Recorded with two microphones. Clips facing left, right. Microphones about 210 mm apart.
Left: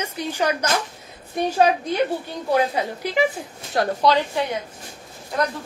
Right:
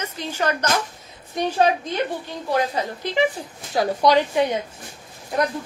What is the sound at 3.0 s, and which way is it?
Speech, 10° left (ahead or behind).